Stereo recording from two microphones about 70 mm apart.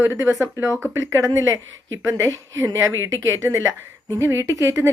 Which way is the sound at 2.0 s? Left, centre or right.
Right.